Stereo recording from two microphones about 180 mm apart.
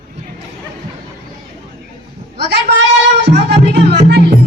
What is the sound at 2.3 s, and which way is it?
Speech, 65° right (ahead or behind).